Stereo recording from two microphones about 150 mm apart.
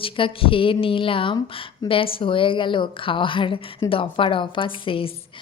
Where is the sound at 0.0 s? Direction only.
35° left (ahead or behind).